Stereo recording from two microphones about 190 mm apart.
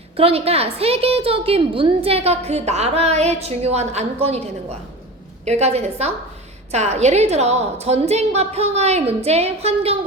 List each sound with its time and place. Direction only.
0.2 s a woman's voice: 30° right (ahead or behind)